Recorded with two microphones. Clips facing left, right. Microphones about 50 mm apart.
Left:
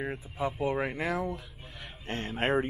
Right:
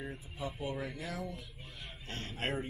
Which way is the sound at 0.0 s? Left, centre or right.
Left.